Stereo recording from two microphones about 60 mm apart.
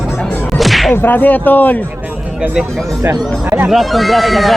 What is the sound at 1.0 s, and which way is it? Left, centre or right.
Speech, left.